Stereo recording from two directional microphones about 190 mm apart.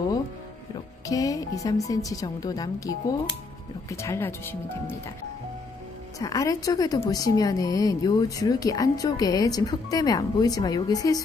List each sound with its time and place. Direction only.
1.0 s a woman's voice: 20° left (ahead or behind)
6.1 s a woman's voice: 15° left (ahead or behind)